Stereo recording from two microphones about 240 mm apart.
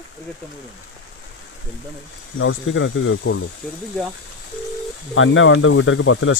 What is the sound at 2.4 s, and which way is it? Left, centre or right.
Speech, left.